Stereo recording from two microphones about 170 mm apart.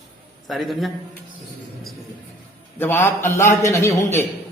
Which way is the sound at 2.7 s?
10° left (ahead or behind).